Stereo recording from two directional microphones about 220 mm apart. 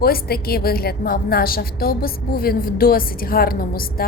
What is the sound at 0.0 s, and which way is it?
A woman's voice, 45° left (ahead or behind).